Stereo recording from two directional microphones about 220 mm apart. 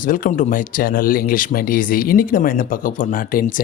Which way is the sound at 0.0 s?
40° left (ahead or behind).